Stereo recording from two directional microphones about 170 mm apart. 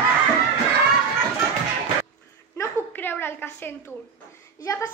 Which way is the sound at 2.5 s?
15° left (ahead or behind).